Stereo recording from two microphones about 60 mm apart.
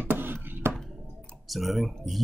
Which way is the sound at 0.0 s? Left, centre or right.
Right.